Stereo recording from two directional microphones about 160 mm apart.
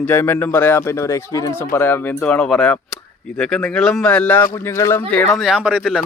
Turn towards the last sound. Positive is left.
turn(degrees=-5)  # may be behind; listen again after turning